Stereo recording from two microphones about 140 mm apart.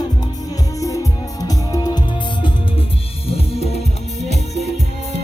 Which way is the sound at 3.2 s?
45° left (ahead or behind).